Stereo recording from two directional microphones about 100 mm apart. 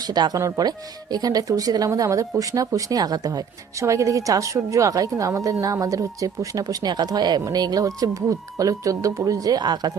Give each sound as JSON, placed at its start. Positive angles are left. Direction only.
{"t": 0.0, "sound": "speech", "side_deg": -40}